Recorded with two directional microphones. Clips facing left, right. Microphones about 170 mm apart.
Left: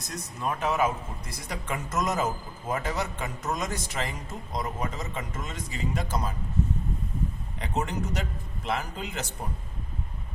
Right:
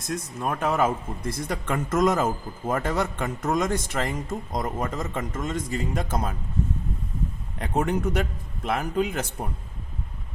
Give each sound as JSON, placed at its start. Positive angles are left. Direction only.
{"t": 0.3, "sound": "speech", "side_deg": -50}
{"t": 7.6, "sound": "speech", "side_deg": -55}